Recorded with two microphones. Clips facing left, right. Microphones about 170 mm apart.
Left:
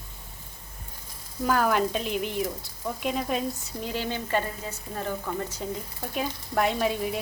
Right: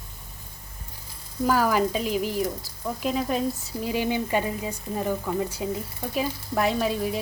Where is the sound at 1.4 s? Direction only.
5° right (ahead or behind).